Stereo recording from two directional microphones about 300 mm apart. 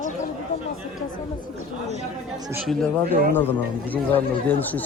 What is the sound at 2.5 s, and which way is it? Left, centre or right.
Speech, centre.